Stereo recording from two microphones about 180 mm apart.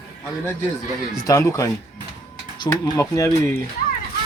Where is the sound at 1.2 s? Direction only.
20° left (ahead or behind).